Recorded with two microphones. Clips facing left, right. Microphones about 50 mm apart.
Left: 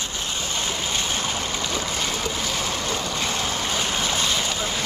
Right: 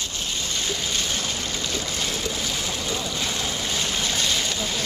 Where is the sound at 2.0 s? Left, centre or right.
Centre.